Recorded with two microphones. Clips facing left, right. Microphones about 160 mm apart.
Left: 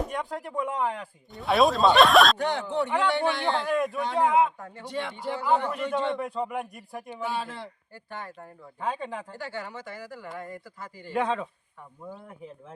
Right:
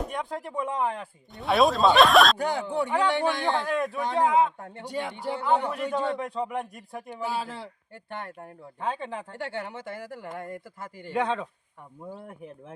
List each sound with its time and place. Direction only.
0.1 s speech: centre (ahead or behind)
2.5 s a man's voice: 10° right (ahead or behind)
3.7 s speech: centre (ahead or behind)
4.9 s a man's voice: 10° right (ahead or behind)
6.1 s speech: 5° left (ahead or behind)
7.1 s a man's voice: 10° right (ahead or behind)
8.8 s speech: centre (ahead or behind)
9.4 s a man's voice: 60° right (ahead or behind)
11.1 s speech: centre (ahead or behind)